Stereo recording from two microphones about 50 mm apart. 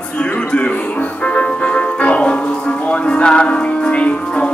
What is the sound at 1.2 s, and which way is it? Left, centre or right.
Music, left.